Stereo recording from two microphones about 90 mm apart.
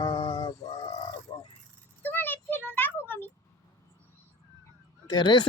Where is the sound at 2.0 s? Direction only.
20° left (ahead or behind).